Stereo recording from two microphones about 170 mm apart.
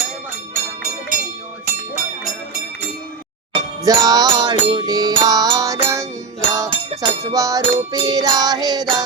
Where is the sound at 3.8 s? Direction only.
20° right (ahead or behind).